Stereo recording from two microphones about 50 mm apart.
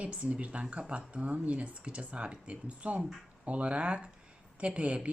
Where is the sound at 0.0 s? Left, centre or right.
Right.